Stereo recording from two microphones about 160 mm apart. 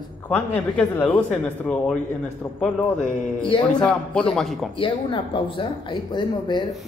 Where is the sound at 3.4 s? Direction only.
30° left (ahead or behind).